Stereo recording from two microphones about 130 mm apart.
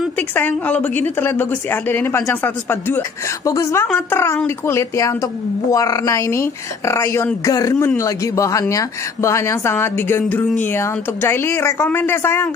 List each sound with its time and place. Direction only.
0.3 s a woman's voice: 15° left (ahead or behind)